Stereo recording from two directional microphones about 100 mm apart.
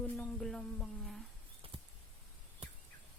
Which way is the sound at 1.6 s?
70° right (ahead or behind).